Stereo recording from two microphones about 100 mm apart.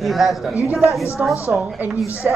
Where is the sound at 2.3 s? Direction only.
10° right (ahead or behind).